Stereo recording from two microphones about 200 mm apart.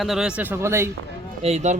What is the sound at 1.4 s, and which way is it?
Speech, 35° right (ahead or behind).